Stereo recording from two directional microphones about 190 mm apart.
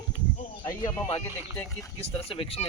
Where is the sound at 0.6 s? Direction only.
20° left (ahead or behind).